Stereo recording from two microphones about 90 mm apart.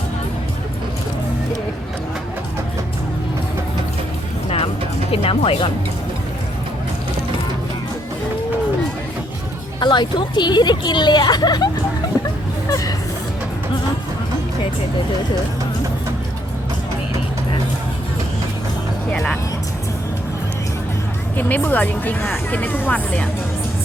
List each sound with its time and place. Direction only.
5.1 s speech: 90° left
9.8 s speech: 55° left (ahead or behind)
19.1 s speech: 5° left (ahead or behind)
21.3 s speech: 20° left (ahead or behind)